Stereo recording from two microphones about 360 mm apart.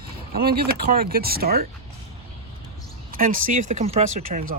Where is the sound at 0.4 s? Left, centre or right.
Right.